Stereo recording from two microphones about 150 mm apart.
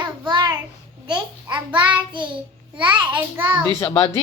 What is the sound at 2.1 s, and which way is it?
Speech, 30° right (ahead or behind).